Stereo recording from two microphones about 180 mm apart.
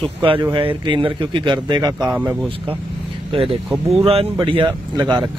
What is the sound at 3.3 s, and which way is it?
Speech, 30° right (ahead or behind).